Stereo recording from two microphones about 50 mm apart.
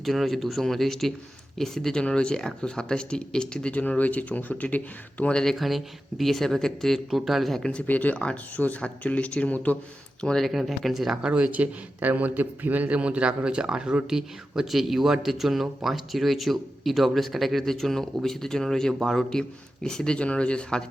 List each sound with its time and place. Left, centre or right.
0.0 s speech: centre; by 5.3 s left
5.3 s speech: centre
5.5 s speech: centre
7.7 s speech: left
10.2 s speech: centre
10.4 s speech: centre
11.3 s a man's voice: right; by 20.1 s centre
20.1 s speech: left